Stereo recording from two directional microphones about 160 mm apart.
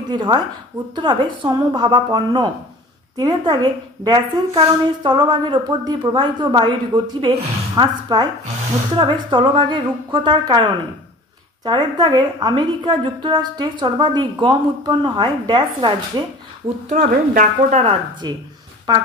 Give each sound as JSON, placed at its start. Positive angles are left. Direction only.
{"t": 0.1, "sound": "a woman's voice", "side_deg": -25}
{"t": 16.9, "sound": "speech", "side_deg": -55}
{"t": 17.7, "sound": "speech", "side_deg": -35}